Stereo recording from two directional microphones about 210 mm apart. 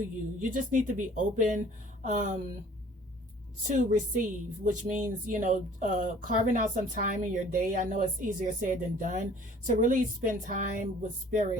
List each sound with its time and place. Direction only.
0.3 s speech: 40° right (ahead or behind)
3.7 s speech: 35° right (ahead or behind)